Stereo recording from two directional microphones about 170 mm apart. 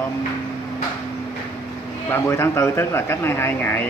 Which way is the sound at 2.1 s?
15° left (ahead or behind).